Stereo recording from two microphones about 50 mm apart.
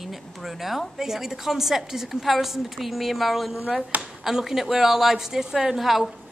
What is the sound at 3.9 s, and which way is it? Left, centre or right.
Speech, right.